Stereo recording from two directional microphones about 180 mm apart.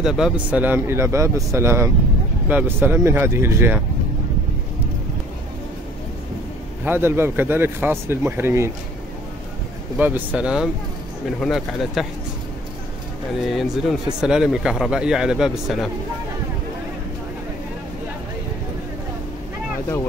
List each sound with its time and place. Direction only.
0.0 s speech: 5° right (ahead or behind)
6.8 s speech: 10° right (ahead or behind)
9.9 s speech: 10° right (ahead or behind)
13.5 s speech: centre (ahead or behind)